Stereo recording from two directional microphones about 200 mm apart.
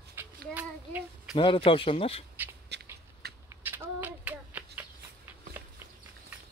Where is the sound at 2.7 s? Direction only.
55° right (ahead or behind).